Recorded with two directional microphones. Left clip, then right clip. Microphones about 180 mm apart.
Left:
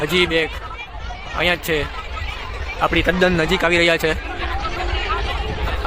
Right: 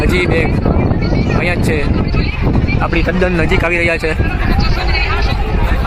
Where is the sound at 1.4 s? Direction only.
5° right (ahead or behind).